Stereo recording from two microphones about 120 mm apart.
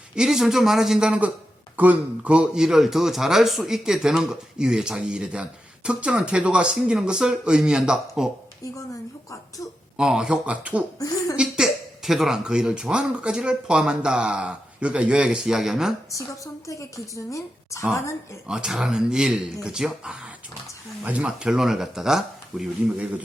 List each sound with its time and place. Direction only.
0.2 s a man's voice: 5° right (ahead or behind)
10.0 s a man's voice: 5° right (ahead or behind)
16.1 s a woman's voice: 25° left (ahead or behind)
18.4 s speech: 5° right (ahead or behind)